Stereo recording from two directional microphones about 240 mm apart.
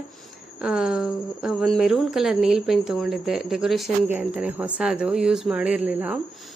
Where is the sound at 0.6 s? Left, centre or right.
Centre.